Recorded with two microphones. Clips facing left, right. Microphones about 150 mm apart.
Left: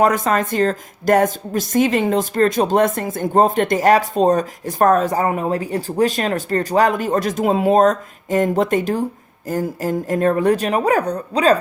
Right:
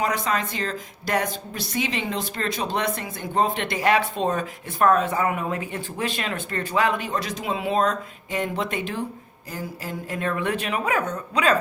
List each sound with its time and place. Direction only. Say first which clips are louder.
0.0 s a woman's voice: left 8 dB; 45° left (ahead or behind)